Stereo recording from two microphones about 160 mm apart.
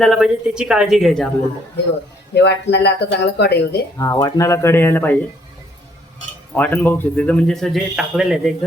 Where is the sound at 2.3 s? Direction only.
90° left.